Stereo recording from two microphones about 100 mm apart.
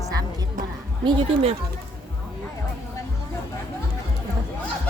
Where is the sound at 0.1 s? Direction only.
40° right (ahead or behind).